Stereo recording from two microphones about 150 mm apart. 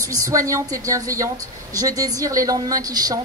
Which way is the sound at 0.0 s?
20° right (ahead or behind).